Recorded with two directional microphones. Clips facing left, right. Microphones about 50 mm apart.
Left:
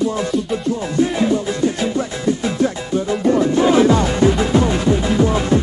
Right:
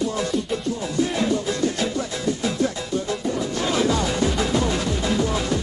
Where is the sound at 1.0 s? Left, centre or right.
Left.